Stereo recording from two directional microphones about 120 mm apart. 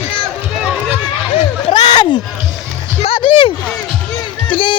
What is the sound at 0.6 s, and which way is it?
Run, 10° right (ahead or behind).